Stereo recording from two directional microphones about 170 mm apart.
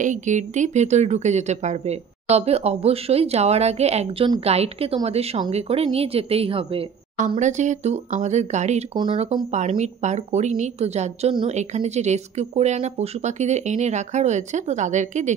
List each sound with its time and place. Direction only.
0.0 s a woman's voice: 45° right (ahead or behind)
7.2 s a woman's voice: 45° right (ahead or behind)
8.9 s speech: 30° right (ahead or behind)
9.5 s a woman's voice: 45° right (ahead or behind)